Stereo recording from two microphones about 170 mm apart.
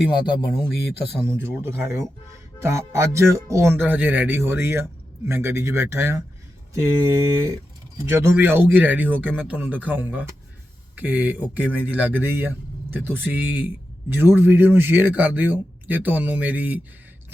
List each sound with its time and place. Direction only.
0.1 s speech: 25° left (ahead or behind)
0.7 s speech: 70° left (ahead or behind)
1.2 s speech: 15° right (ahead or behind)
8.1 s speech: 15° right (ahead or behind)